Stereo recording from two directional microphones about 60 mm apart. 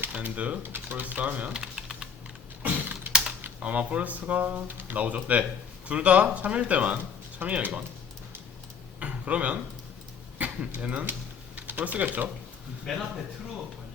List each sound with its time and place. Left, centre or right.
0.1 s speech: right
2.6 s typing: right
3.6 s speech: right
9.0 s a sound: right
10.8 s speech: right
12.8 s speech: centre